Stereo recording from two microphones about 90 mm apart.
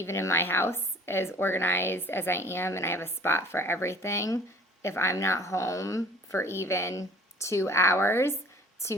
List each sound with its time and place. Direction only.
0.0 s a woman's voice: 30° left (ahead or behind)